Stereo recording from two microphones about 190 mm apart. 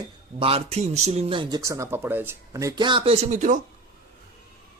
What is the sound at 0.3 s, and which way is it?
Speech, 30° right (ahead or behind).